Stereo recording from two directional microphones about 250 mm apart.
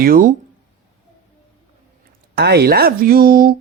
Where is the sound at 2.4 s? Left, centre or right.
Right.